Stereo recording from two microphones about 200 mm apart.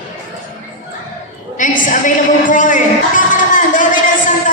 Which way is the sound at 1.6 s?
40° left (ahead or behind).